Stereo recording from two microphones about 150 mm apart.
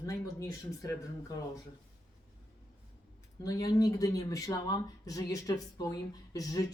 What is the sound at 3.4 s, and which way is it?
Speech, 25° left (ahead or behind).